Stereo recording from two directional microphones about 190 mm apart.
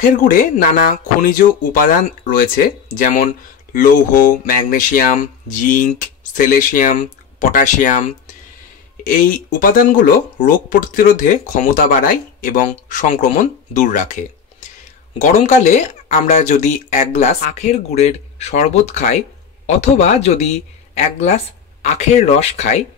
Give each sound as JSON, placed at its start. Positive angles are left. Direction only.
{"t": 0.2, "sound": "speech", "side_deg": 45}
{"t": 9.0, "sound": "speech", "side_deg": 45}
{"t": 15.1, "sound": "speech", "side_deg": 40}